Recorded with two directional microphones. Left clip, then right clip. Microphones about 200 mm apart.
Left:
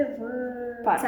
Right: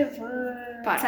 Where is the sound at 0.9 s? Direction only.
30° left (ahead or behind).